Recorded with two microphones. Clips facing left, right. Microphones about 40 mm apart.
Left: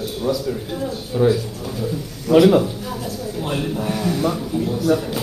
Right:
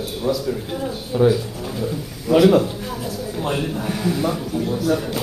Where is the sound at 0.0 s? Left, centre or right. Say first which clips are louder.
Even; centre.